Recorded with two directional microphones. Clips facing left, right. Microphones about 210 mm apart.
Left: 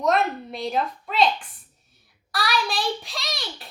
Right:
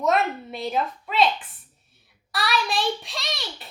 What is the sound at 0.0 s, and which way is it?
A woman's voice, centre (ahead or behind).